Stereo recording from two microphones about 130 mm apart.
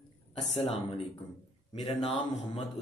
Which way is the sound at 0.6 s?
50° left (ahead or behind).